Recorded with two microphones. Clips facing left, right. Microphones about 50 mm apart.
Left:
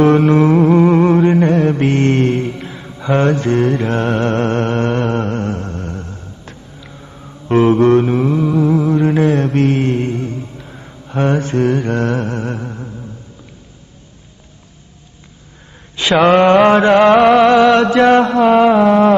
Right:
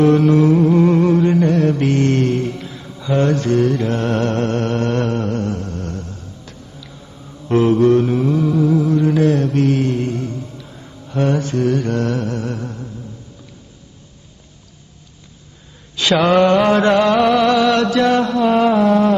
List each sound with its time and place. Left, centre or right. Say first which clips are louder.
0.0 s music: left 2 dB; left
0.9 s mantra: left 3 dB; left
4.1 s a sound: left 2 dB; left
5.1 s mantra: left 2 dB; left
5.8 s a sound: left 1 dB; left
7.4 s mantra: left 2 dB; left
16.0 s mantra: left 3 dB; left
17.0 s music: left 5 dB; left